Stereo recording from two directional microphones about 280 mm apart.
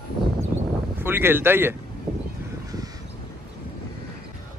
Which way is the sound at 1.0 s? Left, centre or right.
Centre.